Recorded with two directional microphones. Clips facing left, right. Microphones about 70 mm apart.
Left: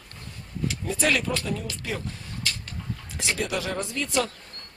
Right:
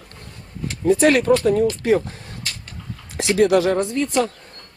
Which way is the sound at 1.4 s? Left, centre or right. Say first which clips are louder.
Right 14 dB; right.